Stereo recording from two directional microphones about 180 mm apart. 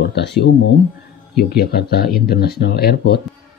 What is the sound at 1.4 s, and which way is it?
Speech, 60° left (ahead or behind).